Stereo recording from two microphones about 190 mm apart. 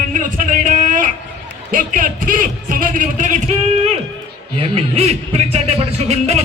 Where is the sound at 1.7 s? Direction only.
45° right (ahead or behind).